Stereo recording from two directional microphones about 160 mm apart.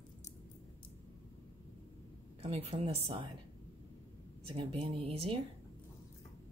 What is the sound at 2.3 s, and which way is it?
Speech, 40° right (ahead or behind).